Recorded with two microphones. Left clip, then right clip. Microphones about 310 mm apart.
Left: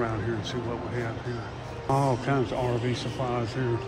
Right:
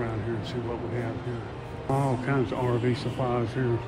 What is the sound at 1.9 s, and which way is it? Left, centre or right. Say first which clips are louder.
Speech: left 2 dB; centre.